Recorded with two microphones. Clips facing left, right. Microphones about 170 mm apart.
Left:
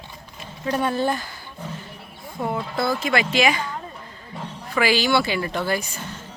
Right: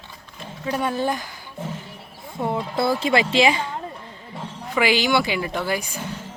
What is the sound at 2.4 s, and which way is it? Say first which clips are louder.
A woman's voice: right 2 dB; 25° right (ahead or behind).